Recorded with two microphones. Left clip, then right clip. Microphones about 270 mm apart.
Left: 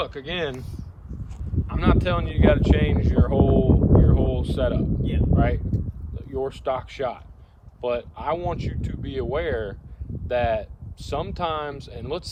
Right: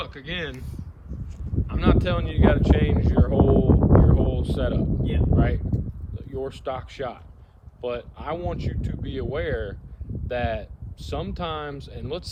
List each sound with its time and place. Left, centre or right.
0.0 s speech: centre
1.6 s speech: left